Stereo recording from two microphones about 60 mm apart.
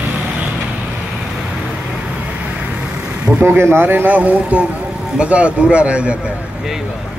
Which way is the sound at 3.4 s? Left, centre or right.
Right.